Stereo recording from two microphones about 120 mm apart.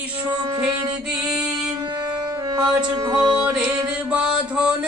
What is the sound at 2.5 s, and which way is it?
Speech, 35° right (ahead or behind).